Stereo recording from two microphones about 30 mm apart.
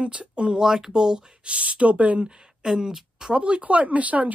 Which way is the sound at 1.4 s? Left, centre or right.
Right.